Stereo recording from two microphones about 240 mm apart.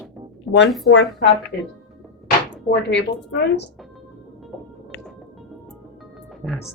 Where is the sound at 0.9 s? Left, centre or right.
Left.